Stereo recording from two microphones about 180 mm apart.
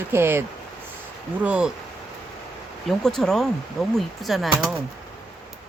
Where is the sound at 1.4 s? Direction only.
5° right (ahead or behind).